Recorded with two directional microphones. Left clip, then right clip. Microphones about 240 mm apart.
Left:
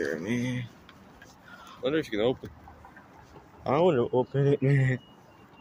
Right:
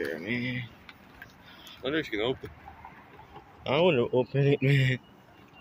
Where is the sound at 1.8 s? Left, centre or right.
Left.